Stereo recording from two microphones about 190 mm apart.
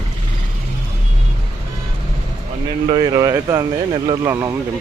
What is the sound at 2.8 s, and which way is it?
Speech, 30° right (ahead or behind).